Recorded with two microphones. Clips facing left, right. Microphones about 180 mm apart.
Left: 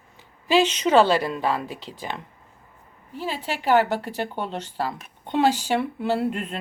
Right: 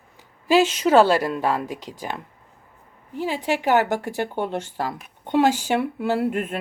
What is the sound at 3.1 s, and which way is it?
Speech, 15° right (ahead or behind).